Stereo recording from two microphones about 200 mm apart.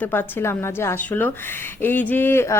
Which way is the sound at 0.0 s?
10° left (ahead or behind).